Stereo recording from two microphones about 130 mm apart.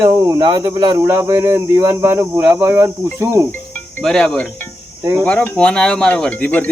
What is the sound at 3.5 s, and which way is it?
Cricket, 15° left (ahead or behind).